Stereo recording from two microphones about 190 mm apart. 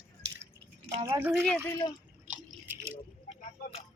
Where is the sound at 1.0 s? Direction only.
10° right (ahead or behind).